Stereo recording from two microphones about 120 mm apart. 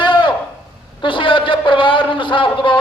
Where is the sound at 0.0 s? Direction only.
40° left (ahead or behind).